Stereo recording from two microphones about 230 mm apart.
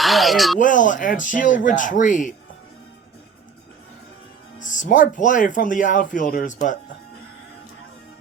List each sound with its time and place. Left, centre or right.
0.0 s speech: centre
0.6 s speech: left
4.6 s speech: left